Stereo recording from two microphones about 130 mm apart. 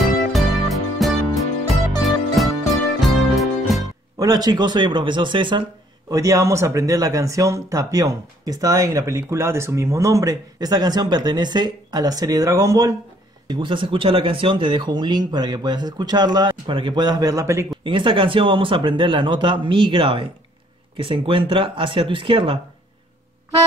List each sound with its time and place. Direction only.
0.3 s music: centre (ahead or behind)
4.2 s speech: 30° right (ahead or behind)
6.0 s speech: 25° right (ahead or behind)
13.5 s speech: 40° right (ahead or behind); by 17.6 s 20° right (ahead or behind)
17.8 s speech: 40° right (ahead or behind)